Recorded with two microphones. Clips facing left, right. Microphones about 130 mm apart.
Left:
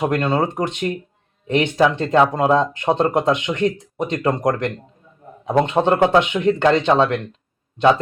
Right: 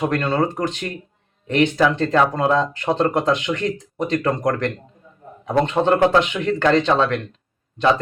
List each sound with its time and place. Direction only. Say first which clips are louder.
0.0 s speech: left 1 dB; 15° left (ahead or behind)